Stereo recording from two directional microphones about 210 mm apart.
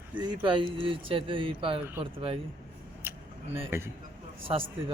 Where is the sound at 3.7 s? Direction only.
10° right (ahead or behind).